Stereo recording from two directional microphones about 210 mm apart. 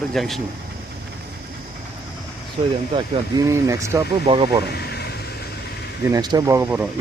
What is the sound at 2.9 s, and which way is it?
Speech, 15° right (ahead or behind).